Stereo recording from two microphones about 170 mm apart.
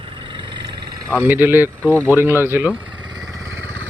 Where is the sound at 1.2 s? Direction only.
10° right (ahead or behind).